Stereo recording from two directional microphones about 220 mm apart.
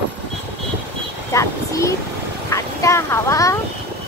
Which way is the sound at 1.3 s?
15° left (ahead or behind).